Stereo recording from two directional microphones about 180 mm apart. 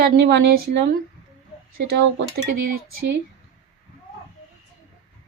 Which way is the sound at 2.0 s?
80° right.